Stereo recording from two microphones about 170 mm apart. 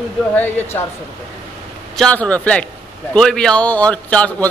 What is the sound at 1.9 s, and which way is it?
Speech, 5° left (ahead or behind).